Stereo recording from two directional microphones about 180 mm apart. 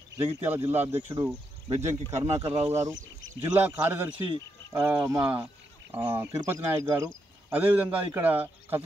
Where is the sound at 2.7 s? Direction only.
15° right (ahead or behind).